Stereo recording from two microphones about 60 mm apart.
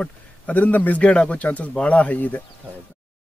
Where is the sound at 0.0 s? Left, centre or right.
Left.